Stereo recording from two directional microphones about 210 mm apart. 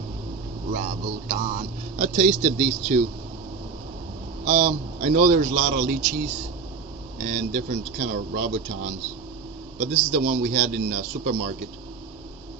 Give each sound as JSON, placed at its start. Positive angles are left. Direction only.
{"t": 0.7, "sound": "speech", "side_deg": -35}
{"t": 4.4, "sound": "a man's voice", "side_deg": -35}
{"t": 7.3, "sound": "a man's voice", "side_deg": -35}
{"t": 9.8, "sound": "a man's voice", "side_deg": -40}